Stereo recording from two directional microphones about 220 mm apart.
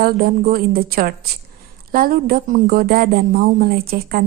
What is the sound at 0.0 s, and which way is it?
A woman's voice, 40° right (ahead or behind).